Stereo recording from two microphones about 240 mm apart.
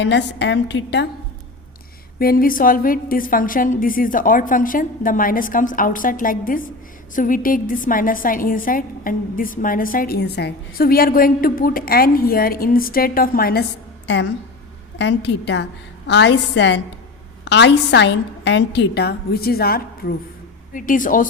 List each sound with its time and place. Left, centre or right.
0.0 s a woman's voice: left
2.1 s a woman's voice: left
14.9 s a woman's voice: left